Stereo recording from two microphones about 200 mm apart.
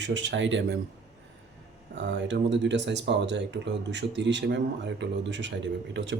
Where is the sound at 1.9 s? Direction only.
60° right (ahead or behind).